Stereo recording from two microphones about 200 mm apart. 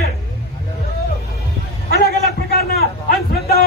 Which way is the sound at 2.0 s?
50° left (ahead or behind).